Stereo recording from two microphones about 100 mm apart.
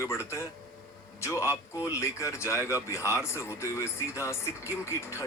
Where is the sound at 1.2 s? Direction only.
30° left (ahead or behind).